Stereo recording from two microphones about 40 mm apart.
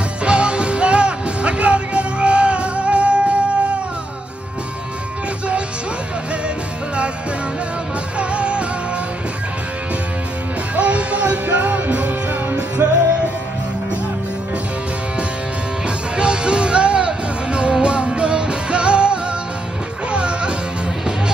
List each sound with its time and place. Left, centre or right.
0.2 s music: right
8.2 s music: right
10.8 s music: right
11.4 s music: right
12.8 s music: right
16.2 s music: right